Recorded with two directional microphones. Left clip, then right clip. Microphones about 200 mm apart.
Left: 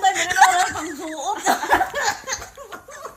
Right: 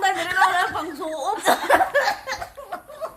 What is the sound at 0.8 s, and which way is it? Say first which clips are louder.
Chuckle: right 1 dB; 25° right (ahead or behind).